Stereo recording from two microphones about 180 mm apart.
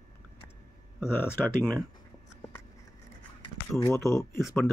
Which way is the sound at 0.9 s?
10° left (ahead or behind).